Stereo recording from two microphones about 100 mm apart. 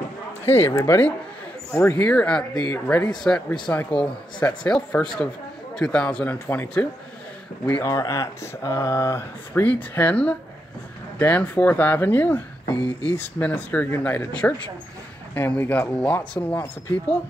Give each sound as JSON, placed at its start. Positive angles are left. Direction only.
{"t": 0.5, "sound": "speech", "side_deg": 25}
{"t": 7.8, "sound": "speech", "side_deg": 35}
{"t": 9.5, "sound": "speech", "side_deg": 15}
{"t": 12.7, "sound": "speech", "side_deg": -45}
{"t": 13.1, "sound": "speech", "side_deg": 15}